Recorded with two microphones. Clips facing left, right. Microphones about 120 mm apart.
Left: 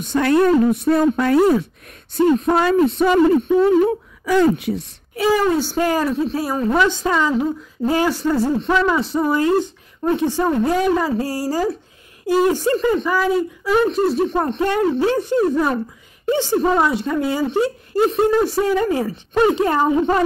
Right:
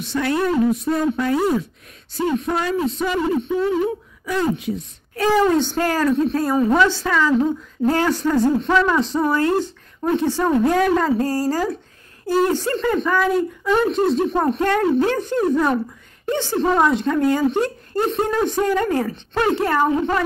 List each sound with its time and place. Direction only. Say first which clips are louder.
0.0 s speech: left 5 dB; 50° left (ahead or behind); by 4.8 s 70° left (ahead or behind)
5.1 s speech: even; 10° left (ahead or behind)
6.8 s speech: even; 15° left (ahead or behind); by 14.6 s centre (ahead or behind)
14.6 s speech: left 1 dB; 10° left (ahead or behind)
16.7 s speech: right 1 dB; centre (ahead or behind); by 20.2 s 20° left (ahead or behind)